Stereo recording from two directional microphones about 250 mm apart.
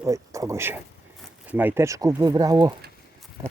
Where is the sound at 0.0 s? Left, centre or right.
Centre.